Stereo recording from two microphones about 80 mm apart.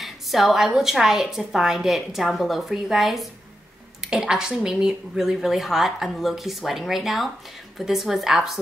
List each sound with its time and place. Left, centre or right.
0.0 s a woman's voice: centre